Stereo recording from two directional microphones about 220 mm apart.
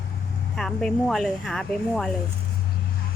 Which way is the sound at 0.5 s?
Centre (ahead or behind).